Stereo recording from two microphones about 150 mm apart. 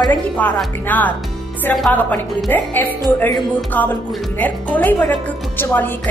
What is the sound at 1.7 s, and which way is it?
Music, centre (ahead or behind).